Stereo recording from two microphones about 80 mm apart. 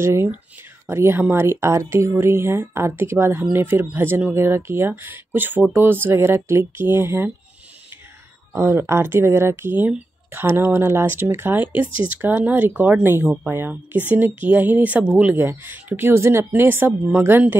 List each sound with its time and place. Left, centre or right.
0.0 s speech: right
8.5 s speech: right